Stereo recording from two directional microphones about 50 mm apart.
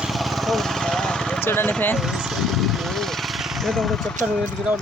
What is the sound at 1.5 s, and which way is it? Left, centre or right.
Speech, left.